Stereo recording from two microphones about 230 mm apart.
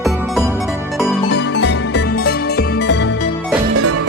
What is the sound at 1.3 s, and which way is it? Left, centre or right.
Music, left.